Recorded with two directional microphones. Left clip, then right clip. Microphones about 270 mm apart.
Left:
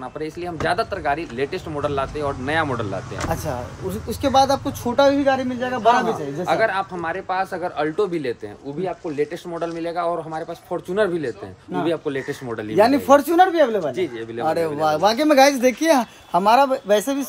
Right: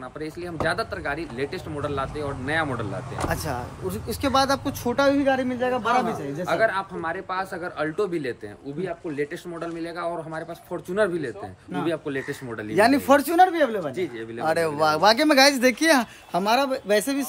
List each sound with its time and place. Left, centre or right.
0.7 s a man's voice: centre
4.1 s speech: centre
6.0 s a man's voice: centre
12.7 s speech: centre
13.9 s a man's voice: centre
14.4 s speech: centre